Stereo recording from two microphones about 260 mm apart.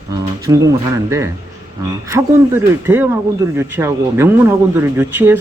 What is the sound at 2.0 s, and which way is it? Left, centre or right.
Speech, centre.